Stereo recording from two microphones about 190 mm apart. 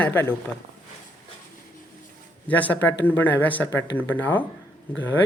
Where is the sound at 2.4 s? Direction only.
10° left (ahead or behind).